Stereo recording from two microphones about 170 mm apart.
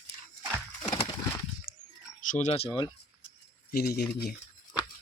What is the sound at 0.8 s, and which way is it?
Horse, 30° left (ahead or behind).